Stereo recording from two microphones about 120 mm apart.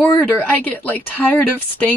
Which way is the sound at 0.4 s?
15° left (ahead or behind).